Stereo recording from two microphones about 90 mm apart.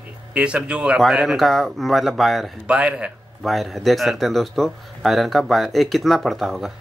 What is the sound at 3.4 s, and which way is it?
Speech, centre (ahead or behind).